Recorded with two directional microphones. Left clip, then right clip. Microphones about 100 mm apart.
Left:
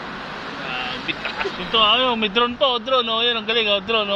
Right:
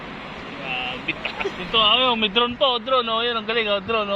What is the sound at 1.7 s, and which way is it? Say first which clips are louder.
Speech: left 1 dB; 25° right (ahead or behind).